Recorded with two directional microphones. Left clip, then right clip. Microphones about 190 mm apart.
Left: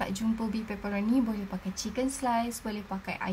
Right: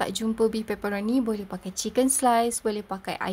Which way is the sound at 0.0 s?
40° right (ahead or behind).